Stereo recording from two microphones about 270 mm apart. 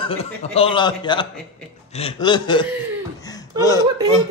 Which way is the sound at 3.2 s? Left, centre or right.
Centre.